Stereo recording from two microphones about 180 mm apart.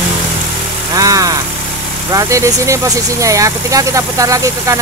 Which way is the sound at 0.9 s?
20° right (ahead or behind).